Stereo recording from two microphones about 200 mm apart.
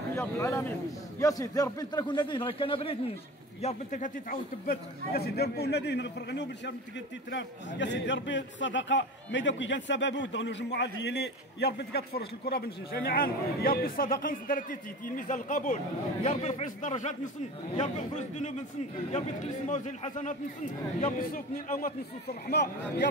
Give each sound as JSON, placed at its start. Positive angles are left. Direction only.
{"t": 0.1, "sound": "a man's voice", "side_deg": 15}
{"t": 3.6, "sound": "a man's voice", "side_deg": 40}
{"t": 19.7, "sound": "a man's voice", "side_deg": 35}